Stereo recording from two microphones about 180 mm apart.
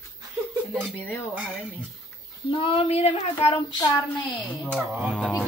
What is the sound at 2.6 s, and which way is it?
Speech, 30° left (ahead or behind).